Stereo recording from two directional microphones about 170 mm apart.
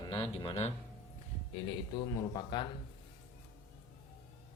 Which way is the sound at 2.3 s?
25° left (ahead or behind).